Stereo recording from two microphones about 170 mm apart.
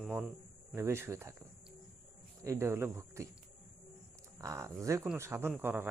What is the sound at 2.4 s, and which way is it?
Speech, 15° right (ahead or behind).